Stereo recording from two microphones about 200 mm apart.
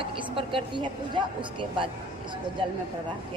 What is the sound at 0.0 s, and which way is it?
Speech, 25° right (ahead or behind).